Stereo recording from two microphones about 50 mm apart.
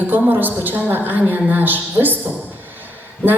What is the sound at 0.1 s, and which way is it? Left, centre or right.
A woman's voice, right.